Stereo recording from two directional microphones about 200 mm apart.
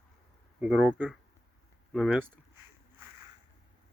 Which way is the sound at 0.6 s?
5° right (ahead or behind).